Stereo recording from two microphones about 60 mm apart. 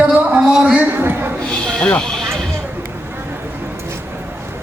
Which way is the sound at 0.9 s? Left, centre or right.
Right.